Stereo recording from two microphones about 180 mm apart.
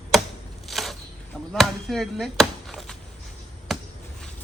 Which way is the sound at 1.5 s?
Centre (ahead or behind).